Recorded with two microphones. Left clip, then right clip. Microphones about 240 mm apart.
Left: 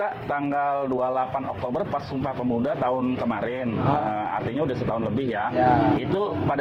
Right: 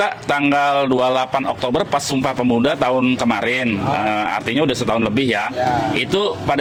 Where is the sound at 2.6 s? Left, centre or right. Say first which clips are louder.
Right 6 dB; right.